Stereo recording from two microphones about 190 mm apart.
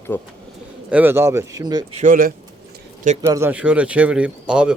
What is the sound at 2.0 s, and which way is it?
Speech, 45° right (ahead or behind).